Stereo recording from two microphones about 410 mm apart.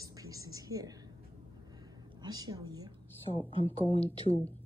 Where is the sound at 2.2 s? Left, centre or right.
Centre.